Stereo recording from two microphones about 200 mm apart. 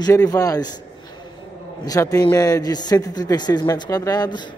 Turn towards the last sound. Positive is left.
turn(degrees=20)  # may be behind; listen again after turning